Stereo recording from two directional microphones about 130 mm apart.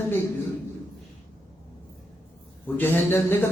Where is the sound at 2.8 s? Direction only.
15° left (ahead or behind).